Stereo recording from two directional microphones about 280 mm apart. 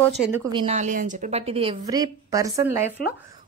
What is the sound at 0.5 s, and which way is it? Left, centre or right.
Speech, right.